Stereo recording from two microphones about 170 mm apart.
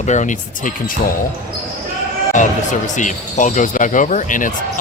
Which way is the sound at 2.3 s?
45° left (ahead or behind).